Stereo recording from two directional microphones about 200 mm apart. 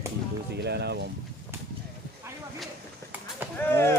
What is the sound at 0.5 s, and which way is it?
Speech, 55° right (ahead or behind).